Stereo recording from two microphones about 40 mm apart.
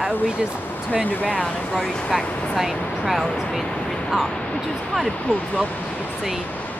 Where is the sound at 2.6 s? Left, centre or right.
Centre.